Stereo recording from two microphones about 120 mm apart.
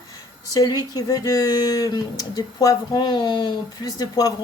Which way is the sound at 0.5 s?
30° left (ahead or behind).